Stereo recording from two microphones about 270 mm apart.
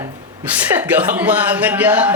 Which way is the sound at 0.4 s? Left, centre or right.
Centre.